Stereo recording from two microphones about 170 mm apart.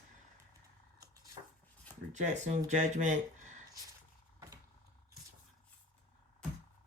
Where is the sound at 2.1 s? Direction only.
45° right (ahead or behind).